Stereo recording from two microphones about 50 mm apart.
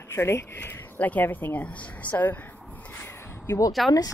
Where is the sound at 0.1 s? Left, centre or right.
Left.